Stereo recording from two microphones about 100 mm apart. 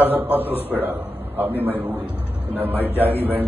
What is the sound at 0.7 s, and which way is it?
A man's voice, 20° right (ahead or behind).